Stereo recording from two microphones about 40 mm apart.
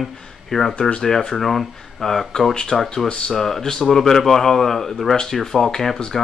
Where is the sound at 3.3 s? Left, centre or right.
Centre.